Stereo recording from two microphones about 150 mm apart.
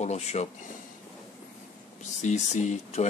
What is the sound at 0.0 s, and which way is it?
Speech, 45° left (ahead or behind).